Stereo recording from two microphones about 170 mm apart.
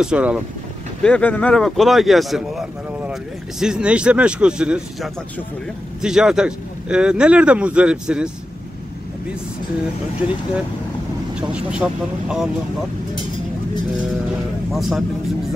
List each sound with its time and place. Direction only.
0.0 s speech: 5° right (ahead or behind)
1.0 s speech: 10° left (ahead or behind)
11.3 s speech: 5° right (ahead or behind)
14.7 s speech: centre (ahead or behind)